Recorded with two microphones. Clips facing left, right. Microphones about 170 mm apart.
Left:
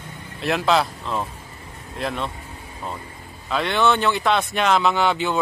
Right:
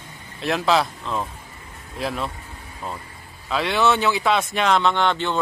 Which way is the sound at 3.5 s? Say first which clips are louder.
Even; centre (ahead or behind).